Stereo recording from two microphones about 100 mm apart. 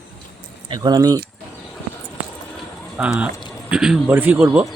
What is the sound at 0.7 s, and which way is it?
Speech, 45° right (ahead or behind).